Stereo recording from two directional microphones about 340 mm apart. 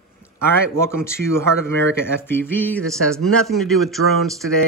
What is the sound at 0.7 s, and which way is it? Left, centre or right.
Speech, centre.